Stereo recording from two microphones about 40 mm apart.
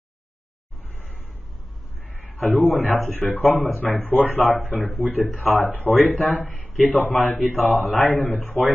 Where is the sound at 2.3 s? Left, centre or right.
Left.